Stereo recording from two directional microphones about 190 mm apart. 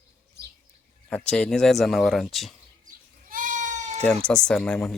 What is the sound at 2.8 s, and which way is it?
Goat, 45° right (ahead or behind).